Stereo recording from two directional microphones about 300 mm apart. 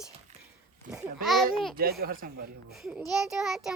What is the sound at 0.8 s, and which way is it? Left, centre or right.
Speech, right.